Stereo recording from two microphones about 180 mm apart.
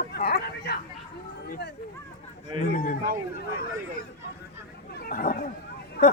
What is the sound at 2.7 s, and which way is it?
Speech, 55° left (ahead or behind).